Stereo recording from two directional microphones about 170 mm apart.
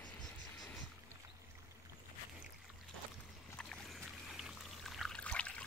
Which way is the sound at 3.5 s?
Centre (ahead or behind).